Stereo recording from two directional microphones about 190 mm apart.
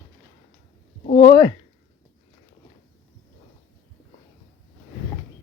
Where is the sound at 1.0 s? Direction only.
45° left (ahead or behind).